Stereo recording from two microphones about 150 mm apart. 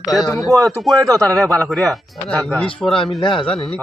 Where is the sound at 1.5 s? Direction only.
20° right (ahead or behind).